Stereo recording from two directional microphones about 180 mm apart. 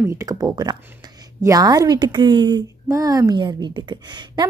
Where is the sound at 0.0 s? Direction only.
15° right (ahead or behind).